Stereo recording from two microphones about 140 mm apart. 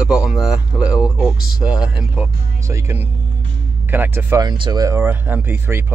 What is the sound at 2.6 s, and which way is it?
Speech, 20° right (ahead or behind).